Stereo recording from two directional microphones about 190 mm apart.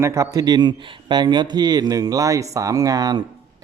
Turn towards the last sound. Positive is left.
turn(degrees=-20)  # may be behind; listen again after turning